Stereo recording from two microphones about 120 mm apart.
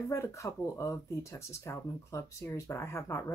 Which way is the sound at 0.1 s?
25° left (ahead or behind).